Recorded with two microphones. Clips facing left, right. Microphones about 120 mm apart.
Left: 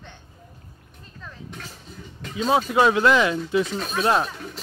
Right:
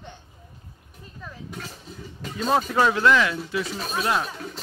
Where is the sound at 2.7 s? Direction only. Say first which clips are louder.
Left 2 dB; 15° left (ahead or behind).